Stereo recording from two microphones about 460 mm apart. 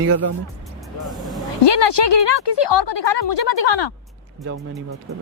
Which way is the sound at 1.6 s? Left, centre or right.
Left.